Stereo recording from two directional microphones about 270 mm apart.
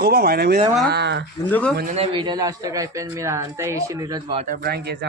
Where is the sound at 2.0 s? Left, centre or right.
Centre.